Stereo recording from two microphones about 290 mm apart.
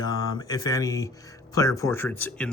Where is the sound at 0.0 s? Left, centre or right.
Centre.